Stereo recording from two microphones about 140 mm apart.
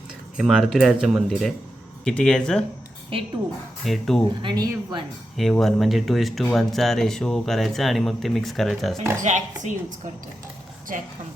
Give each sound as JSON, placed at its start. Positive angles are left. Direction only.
{"t": 0.3, "sound": "speech", "side_deg": -5}
{"t": 3.1, "sound": "speech", "side_deg": -40}
{"t": 3.8, "sound": "speech", "side_deg": 0}
{"t": 4.4, "sound": "speech", "side_deg": -35}
{"t": 5.4, "sound": "speech", "side_deg": 0}
{"t": 9.2, "sound": "speech", "side_deg": -60}
{"t": 10.9, "sound": "speech", "side_deg": -70}